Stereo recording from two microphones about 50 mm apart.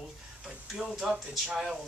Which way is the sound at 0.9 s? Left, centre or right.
Centre.